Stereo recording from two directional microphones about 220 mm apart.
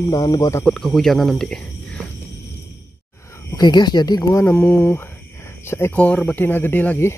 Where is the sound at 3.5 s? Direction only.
20° left (ahead or behind).